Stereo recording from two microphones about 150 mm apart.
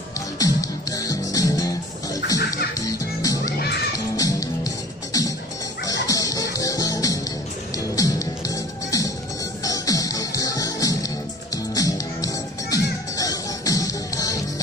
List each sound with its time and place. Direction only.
0.4 s music: 20° left (ahead or behind)